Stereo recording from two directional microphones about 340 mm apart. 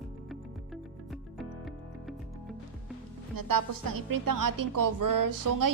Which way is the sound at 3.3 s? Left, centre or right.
Right.